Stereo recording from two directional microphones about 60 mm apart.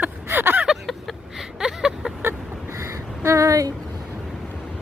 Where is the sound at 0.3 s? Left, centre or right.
Right.